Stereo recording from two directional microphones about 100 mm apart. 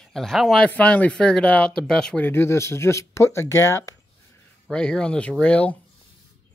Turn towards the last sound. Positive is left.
turn(degrees=15)  # may be behind; listen again after turning